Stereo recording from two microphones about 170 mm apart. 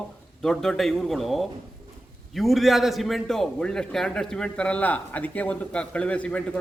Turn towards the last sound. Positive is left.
turn(degrees=5)  # may be behind; listen again after turning